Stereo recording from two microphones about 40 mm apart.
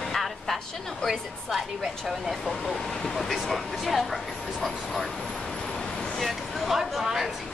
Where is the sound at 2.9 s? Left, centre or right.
Centre.